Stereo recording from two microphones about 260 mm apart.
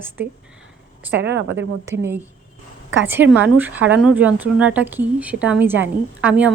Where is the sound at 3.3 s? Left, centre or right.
Centre.